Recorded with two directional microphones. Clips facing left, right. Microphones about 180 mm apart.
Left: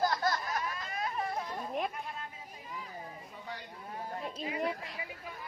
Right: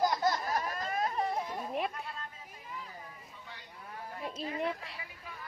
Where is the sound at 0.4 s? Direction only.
35° right (ahead or behind).